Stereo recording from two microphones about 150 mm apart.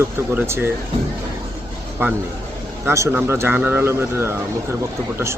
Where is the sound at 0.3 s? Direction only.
15° right (ahead or behind).